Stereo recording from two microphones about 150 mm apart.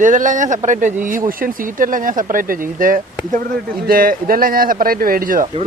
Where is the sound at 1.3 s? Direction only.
70° right (ahead or behind).